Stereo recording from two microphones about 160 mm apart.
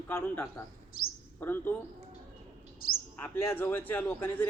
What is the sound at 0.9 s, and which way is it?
Speech, 65° left (ahead or behind).